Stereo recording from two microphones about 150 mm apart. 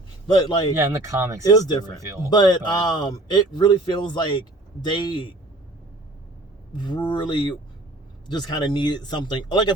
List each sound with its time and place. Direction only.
0.3 s a man's voice: 30° left (ahead or behind)
0.8 s speech: 15° right (ahead or behind)
1.5 s a man's voice: 25° left (ahead or behind)
2.0 s speech: 20° right (ahead or behind)
2.3 s a man's voice: 30° left (ahead or behind)
6.7 s a man's voice: 30° left (ahead or behind)